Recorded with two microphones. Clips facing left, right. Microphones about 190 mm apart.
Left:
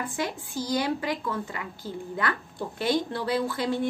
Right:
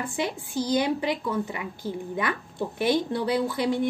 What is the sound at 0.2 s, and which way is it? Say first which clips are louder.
A woman's voice: right 4 dB; 20° right (ahead or behind).